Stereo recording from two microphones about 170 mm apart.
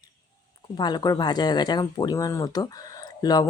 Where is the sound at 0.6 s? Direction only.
25° left (ahead or behind).